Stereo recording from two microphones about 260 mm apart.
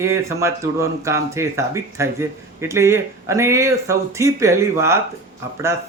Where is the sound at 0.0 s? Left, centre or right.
Centre.